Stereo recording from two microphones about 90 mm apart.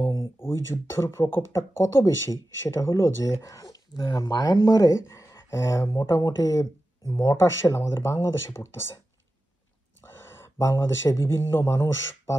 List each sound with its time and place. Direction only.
0.0 s a sound: 35° left (ahead or behind)
1.3 s speech: 30° left (ahead or behind)
10.2 s speech: 25° left (ahead or behind)